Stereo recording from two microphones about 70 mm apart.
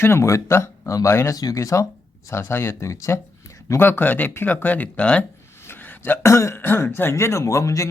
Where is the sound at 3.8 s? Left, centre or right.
Left.